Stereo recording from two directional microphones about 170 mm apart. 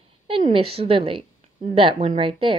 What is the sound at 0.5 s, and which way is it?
A woman's voice, 35° right (ahead or behind).